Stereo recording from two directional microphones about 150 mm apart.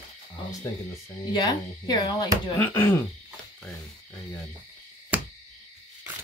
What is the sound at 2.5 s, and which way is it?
Speech, 15° left (ahead or behind).